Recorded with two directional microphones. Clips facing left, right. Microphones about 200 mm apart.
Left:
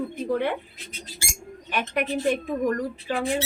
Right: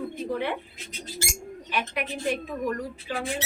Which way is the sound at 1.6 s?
45° left (ahead or behind).